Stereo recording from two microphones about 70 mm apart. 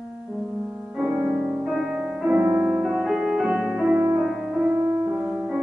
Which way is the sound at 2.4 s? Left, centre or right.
Centre.